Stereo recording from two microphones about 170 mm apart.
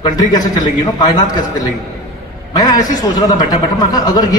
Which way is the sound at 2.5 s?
20° left (ahead or behind).